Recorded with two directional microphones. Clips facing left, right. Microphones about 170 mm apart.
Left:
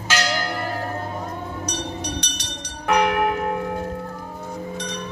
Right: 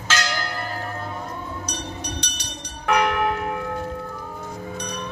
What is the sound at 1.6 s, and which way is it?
Music, 75° left (ahead or behind).